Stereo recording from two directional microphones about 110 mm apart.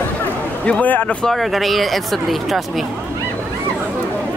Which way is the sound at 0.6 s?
10° left (ahead or behind).